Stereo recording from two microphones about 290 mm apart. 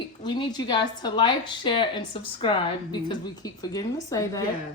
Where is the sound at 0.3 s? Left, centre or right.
Centre.